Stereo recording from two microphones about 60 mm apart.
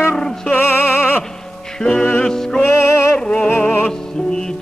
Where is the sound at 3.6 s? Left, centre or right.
Left.